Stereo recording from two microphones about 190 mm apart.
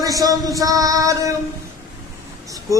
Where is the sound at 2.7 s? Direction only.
15° right (ahead or behind).